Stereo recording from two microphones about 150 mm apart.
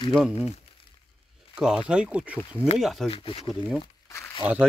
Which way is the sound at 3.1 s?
40° left (ahead or behind).